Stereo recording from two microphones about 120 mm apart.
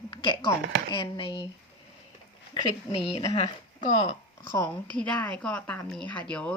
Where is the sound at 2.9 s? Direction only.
55° left (ahead or behind).